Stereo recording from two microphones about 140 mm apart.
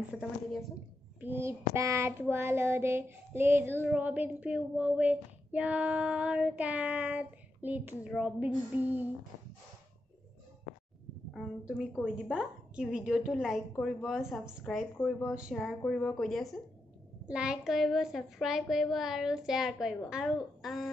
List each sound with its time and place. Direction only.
0.2 s a woman's voice: centre (ahead or behind)
1.2 s child singing: 15° right (ahead or behind)
11.3 s a woman's voice: 5° right (ahead or behind)
15.8 s a woman's voice: 5° left (ahead or behind)